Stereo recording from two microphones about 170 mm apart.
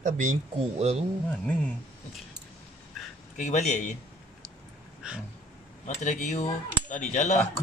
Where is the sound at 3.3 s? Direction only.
45° left (ahead or behind).